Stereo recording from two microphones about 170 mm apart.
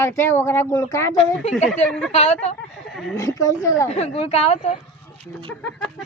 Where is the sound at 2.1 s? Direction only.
40° left (ahead or behind).